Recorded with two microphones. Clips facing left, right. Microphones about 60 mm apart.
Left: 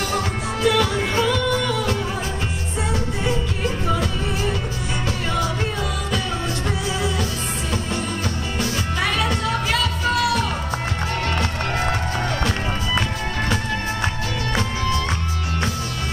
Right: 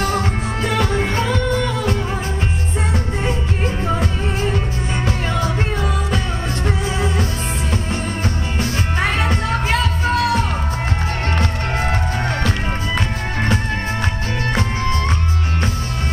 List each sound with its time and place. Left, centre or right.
0.7 s music: right
3.3 s music: right
8.5 s music: right